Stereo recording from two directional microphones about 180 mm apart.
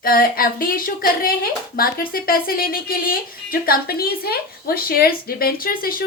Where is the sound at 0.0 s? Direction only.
55° left (ahead or behind).